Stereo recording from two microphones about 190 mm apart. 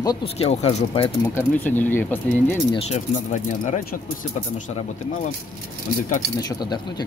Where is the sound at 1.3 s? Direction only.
10° left (ahead or behind).